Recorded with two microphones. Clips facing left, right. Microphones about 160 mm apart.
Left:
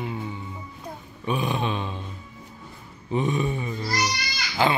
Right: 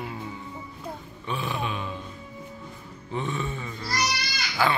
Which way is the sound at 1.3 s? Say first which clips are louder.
Left 5 dB; 15° left (ahead or behind).